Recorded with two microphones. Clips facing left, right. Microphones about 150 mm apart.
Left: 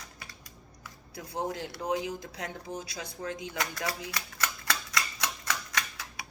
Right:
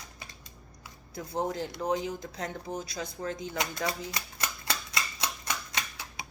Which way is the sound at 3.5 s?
20° right (ahead or behind).